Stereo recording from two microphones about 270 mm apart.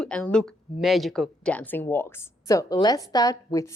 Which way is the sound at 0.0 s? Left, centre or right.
Centre.